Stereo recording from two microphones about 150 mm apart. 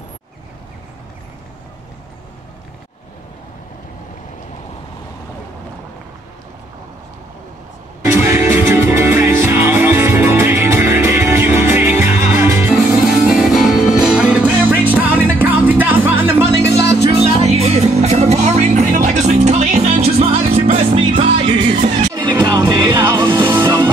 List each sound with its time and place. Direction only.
8.1 s music: 15° right (ahead or behind)
13.3 s music: centre (ahead or behind)
17.1 s music: 45° right (ahead or behind)
22.2 s music: 30° right (ahead or behind)